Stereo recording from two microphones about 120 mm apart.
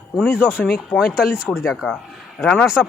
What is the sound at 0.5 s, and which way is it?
Speech, 5° right (ahead or behind).